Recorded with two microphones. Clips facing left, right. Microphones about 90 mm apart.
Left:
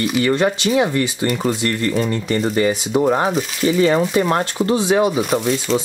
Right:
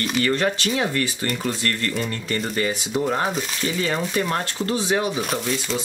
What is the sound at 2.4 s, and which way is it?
Speech, 30° left (ahead or behind).